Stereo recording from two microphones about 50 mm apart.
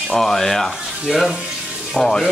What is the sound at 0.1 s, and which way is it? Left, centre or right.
Speech, centre.